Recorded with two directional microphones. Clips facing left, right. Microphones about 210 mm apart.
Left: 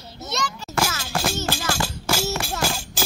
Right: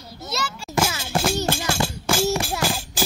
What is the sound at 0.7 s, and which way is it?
Music, 20° right (ahead or behind).